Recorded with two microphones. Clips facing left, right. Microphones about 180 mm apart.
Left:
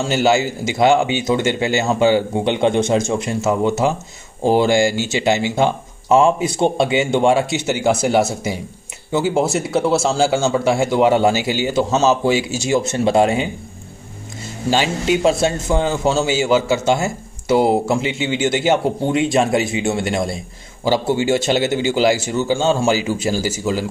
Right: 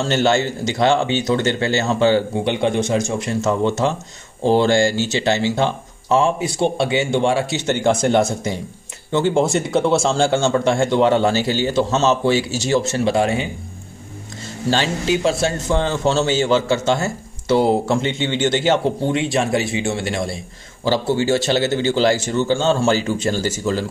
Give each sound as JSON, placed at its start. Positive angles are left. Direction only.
{"t": 0.0, "sound": "speech", "side_deg": 10}
{"t": 3.3, "sound": "speech", "side_deg": 5}
{"t": 14.7, "sound": "speech", "side_deg": 15}
{"t": 19.2, "sound": "speech", "side_deg": 20}